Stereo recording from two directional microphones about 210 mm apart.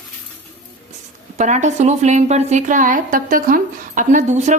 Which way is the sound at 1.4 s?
35° right (ahead or behind).